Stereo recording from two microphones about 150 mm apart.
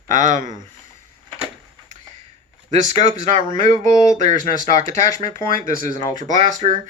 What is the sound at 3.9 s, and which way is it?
Speech, 25° left (ahead or behind).